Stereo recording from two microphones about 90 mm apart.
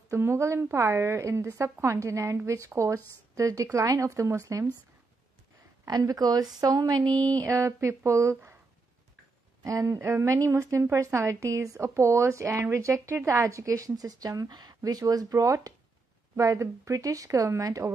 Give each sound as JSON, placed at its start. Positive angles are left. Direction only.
{"t": 0.1, "sound": "a woman's voice", "side_deg": -30}
{"t": 5.9, "sound": "speech", "side_deg": -45}
{"t": 9.6, "sound": "a woman's voice", "side_deg": -40}